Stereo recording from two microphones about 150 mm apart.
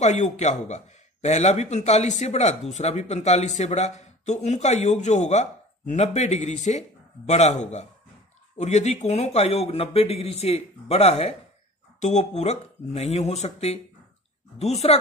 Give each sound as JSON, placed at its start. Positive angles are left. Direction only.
{"t": 0.0, "sound": "speech", "side_deg": 50}